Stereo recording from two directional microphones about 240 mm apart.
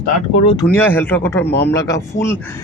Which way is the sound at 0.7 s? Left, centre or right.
Centre.